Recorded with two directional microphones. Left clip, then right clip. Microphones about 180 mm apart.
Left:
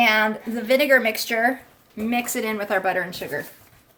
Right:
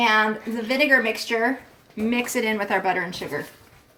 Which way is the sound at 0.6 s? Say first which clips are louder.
Left 2 dB; 45° left (ahead or behind).